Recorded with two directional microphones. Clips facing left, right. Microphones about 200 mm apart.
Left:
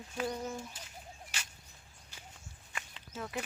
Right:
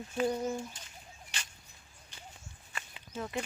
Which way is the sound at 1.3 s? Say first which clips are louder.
Right 2 dB; 5° left (ahead or behind).